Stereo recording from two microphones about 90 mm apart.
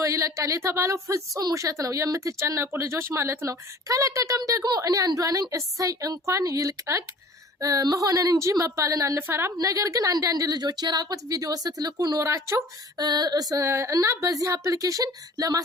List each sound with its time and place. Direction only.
0.0 s speech: 35° right (ahead or behind)
9.1 s a woman's voice: 25° right (ahead or behind)
9.6 s a woman's voice: 35° right (ahead or behind)
13.0 s a woman's voice: 50° right (ahead or behind)
13.7 s speech: 35° right (ahead or behind)